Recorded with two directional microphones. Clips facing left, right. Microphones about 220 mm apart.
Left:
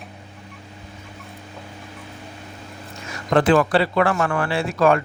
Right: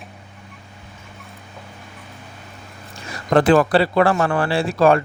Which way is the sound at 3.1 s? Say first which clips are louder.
Right 2 dB; 40° right (ahead or behind).